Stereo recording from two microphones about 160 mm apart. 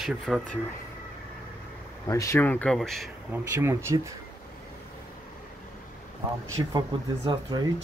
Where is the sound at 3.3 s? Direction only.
15° right (ahead or behind).